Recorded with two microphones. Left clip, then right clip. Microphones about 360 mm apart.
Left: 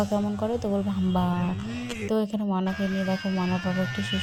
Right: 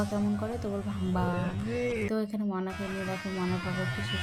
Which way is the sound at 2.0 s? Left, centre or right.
Left.